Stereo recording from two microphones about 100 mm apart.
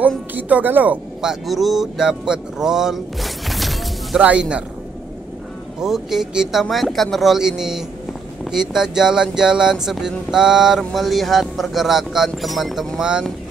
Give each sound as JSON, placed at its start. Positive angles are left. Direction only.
{"t": 0.3, "sound": "speech", "side_deg": -15}
{"t": 1.2, "sound": "speech", "side_deg": -5}
{"t": 4.2, "sound": "speech", "side_deg": -10}
{"t": 5.8, "sound": "speech", "side_deg": -5}